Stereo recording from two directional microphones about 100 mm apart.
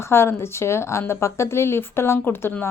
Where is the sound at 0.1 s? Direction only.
25° left (ahead or behind).